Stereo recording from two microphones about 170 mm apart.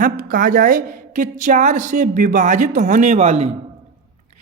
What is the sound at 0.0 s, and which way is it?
Speech, 55° right (ahead or behind).